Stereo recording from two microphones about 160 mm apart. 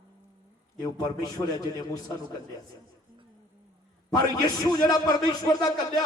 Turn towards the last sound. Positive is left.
turn(degrees=20)  # may be behind; listen again after turning